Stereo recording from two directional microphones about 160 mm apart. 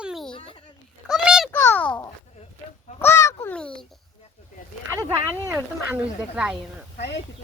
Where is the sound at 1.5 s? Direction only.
10° left (ahead or behind).